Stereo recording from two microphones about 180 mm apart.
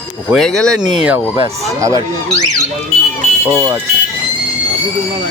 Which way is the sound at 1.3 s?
20° right (ahead or behind).